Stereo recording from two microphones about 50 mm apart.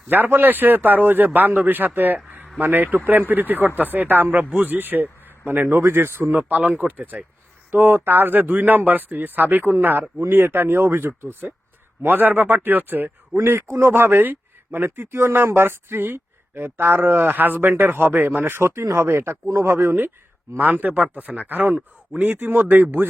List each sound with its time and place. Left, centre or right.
0.1 s speech: right
5.6 s speech: right
6.2 s speech: right
13.3 s a man's voice: right
17.7 s speech: right
18.6 s speech: right
19.6 s speech: right